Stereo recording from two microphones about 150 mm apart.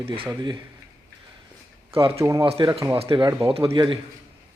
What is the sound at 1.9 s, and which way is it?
Speech, 35° right (ahead or behind).